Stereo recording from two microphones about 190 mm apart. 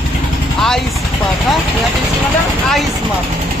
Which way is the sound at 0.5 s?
Centre (ahead or behind).